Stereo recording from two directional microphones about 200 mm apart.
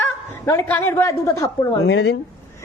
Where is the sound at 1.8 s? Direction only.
60° left (ahead or behind).